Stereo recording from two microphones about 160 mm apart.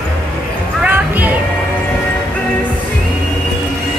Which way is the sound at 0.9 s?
10° right (ahead or behind).